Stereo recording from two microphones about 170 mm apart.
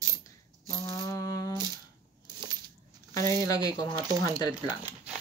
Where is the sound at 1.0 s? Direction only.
20° left (ahead or behind).